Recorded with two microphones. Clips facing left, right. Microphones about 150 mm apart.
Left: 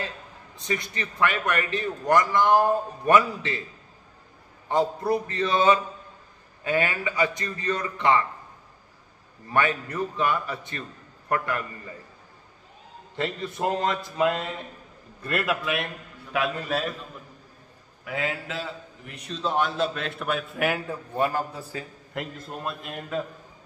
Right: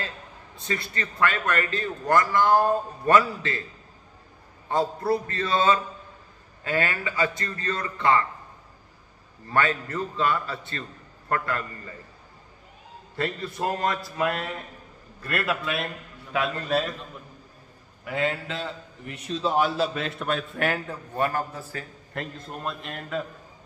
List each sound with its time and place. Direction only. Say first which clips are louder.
0.6 s a man's voice: left 1 dB; 15° left (ahead or behind)
4.6 s a man's voice: left 1 dB; 15° left (ahead or behind)
9.5 s a man's voice: even; 15° left (ahead or behind)
13.1 s a man's voice: even; 15° left (ahead or behind)
15.6 s a man's voice: left 1 dB; 10° left (ahead or behind)
18.0 s a man's voice: right 3 dB; 5° left (ahead or behind)